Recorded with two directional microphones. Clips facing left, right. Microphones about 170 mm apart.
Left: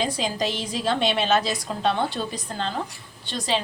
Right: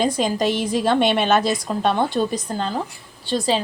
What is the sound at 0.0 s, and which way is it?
A woman's voice, 50° right (ahead or behind).